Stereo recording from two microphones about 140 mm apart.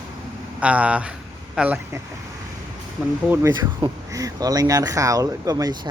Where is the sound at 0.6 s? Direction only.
10° right (ahead or behind).